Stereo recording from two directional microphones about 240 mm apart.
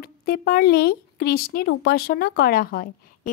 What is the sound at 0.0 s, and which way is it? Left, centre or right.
Speech, left.